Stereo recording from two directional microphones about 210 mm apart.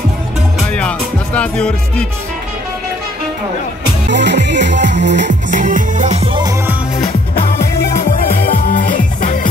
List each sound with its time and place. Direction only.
0.7 s music: 5° left (ahead or behind)
4.1 s music: 55° right (ahead or behind)
5.5 s music: 40° right (ahead or behind)
6.2 s music: 20° right (ahead or behind)
8.4 s music: 40° left (ahead or behind)